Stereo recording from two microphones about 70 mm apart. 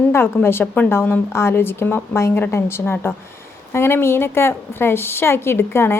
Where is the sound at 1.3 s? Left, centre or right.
Left.